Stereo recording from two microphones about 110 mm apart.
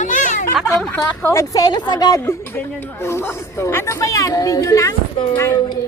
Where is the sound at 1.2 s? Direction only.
25° left (ahead or behind).